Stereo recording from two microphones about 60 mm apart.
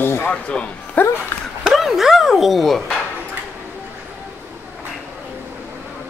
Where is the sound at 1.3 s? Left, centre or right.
Left.